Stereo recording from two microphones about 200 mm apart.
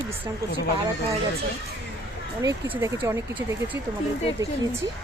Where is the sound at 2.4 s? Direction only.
15° right (ahead or behind).